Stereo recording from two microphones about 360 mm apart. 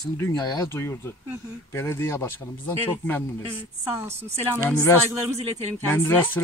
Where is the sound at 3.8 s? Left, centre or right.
Centre.